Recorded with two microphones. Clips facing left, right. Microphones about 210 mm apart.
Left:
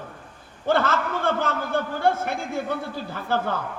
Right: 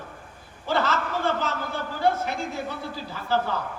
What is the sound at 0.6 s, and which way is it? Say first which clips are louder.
A man's voice: left 3 dB; 55° left (ahead or behind).